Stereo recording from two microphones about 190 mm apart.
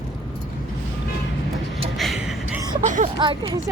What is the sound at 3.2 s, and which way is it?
Speech, 25° right (ahead or behind).